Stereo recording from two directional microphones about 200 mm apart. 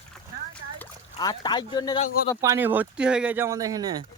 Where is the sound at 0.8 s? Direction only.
20° left (ahead or behind).